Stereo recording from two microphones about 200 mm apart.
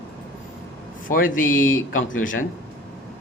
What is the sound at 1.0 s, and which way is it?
Speech, 45° left (ahead or behind).